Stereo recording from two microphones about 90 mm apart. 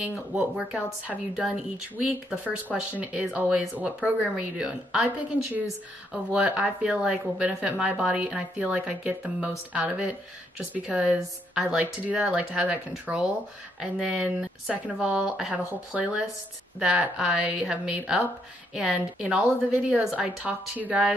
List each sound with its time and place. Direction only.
0.0 s a woman's voice: 15° right (ahead or behind)
6.3 s a woman's voice: 15° right (ahead or behind)